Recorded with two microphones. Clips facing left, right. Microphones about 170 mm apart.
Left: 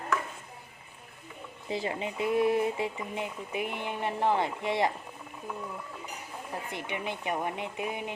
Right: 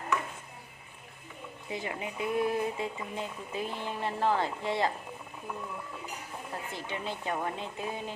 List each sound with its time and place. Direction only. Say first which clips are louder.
1.7 s speech: left 4 dB; 30° left (ahead or behind)
6.7 s speech: left 2 dB; 15° left (ahead or behind)